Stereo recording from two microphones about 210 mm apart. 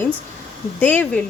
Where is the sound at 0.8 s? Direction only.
10° left (ahead or behind).